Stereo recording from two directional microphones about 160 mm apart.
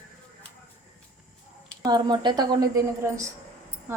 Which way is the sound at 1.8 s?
25° right (ahead or behind).